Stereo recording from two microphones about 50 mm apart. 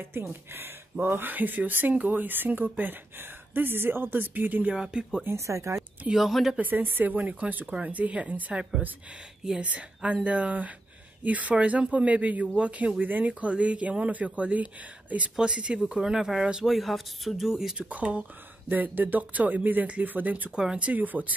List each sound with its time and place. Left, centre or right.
0.0 s speech: right
4.7 s speech: centre
5.2 s speech: right
6.1 s speech: centre
6.6 s speech: right
7.2 s speech: right
13.3 s speech: right
15.3 s speech: centre
16.0 s speech: centre
17.7 s speech: right
20.5 s speech: centre
20.8 s speech: right